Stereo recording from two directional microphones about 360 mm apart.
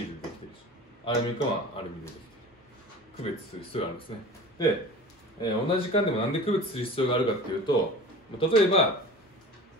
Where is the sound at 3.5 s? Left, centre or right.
Centre.